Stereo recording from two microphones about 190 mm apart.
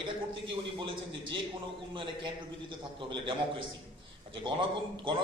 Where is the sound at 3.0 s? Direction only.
25° right (ahead or behind).